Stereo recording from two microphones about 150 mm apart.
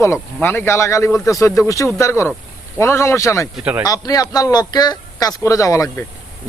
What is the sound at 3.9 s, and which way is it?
Speech, 25° left (ahead or behind).